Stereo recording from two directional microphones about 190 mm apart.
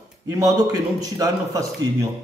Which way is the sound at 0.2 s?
20° right (ahead or behind).